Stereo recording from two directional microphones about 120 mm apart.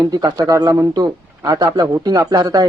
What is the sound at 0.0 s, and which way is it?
Speech, 35° right (ahead or behind).